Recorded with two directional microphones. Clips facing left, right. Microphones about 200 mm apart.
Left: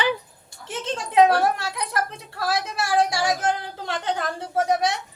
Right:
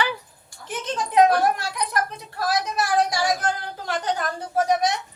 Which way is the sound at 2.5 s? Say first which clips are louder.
Right 1 dB; 25° left (ahead or behind).